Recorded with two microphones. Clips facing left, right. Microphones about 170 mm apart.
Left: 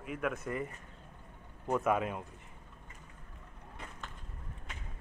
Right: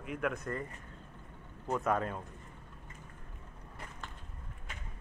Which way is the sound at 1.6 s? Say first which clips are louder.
Left 2 dB; 10° left (ahead or behind).